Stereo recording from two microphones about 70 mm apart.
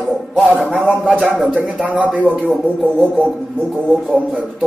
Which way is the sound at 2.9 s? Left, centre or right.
Left.